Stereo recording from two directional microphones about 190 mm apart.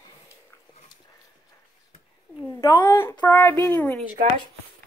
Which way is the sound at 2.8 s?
10° left (ahead or behind).